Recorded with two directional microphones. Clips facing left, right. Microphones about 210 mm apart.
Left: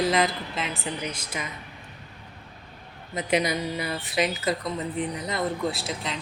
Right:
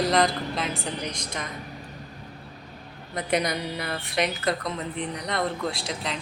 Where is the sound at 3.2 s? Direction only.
5° left (ahead or behind).